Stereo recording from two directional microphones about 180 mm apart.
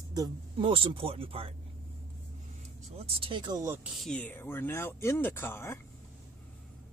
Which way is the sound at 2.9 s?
30° right (ahead or behind).